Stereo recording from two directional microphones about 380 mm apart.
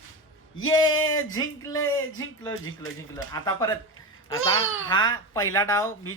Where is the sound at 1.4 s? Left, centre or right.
Centre.